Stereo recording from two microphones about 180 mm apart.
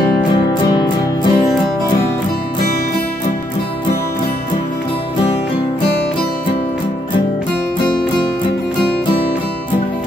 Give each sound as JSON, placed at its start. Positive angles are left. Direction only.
{"t": 0.7, "sound": "music", "side_deg": 25}